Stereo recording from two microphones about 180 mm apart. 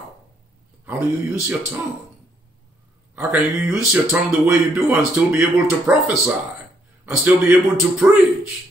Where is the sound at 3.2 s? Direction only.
10° right (ahead or behind).